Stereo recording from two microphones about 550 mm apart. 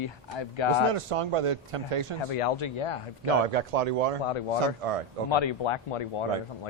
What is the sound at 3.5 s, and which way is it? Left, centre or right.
Speech, right.